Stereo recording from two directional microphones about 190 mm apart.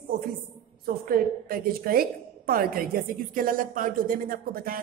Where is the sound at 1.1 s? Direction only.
50° right (ahead or behind).